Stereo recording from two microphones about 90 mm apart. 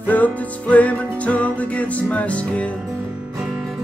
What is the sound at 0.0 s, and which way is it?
Music, 20° left (ahead or behind).